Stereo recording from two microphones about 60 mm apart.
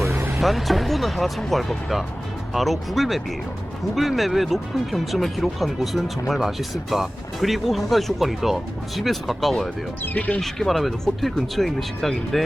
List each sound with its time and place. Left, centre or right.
0.3 s speech: centre
10.0 s speech: left
10.4 s speech: centre